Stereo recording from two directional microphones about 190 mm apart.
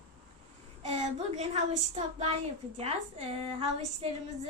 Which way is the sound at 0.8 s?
35° right (ahead or behind).